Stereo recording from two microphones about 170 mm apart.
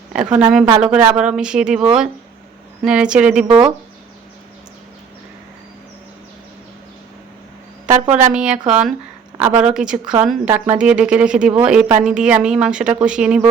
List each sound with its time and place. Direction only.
0.1 s a woman's voice: 5° right (ahead or behind)
3.4 s speech: 30° right (ahead or behind)
8.1 s speech: 5° right (ahead or behind)